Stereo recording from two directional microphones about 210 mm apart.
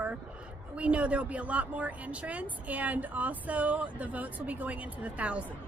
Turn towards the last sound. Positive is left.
turn(degrees=-5)  # may be behind; listen again after turning